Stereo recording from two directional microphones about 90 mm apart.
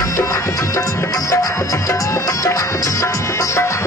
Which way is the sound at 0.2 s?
35° left (ahead or behind).